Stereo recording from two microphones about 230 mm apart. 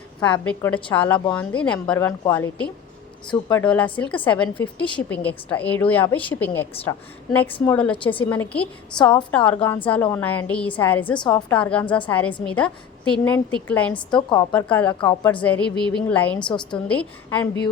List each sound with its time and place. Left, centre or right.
0.2 s a woman's voice: centre
11.2 s a woman's voice: centre
11.5 s a woman's voice: centre
14.2 s a woman's voice: centre
14.5 s a woman's voice: centre
16.4 s a woman's voice: centre
16.7 s a woman's voice: centre